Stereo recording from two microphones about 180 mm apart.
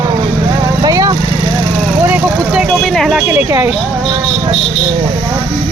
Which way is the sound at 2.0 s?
10° right (ahead or behind).